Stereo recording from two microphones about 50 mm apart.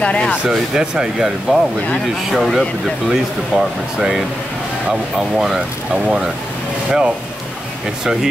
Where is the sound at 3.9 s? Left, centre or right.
Centre.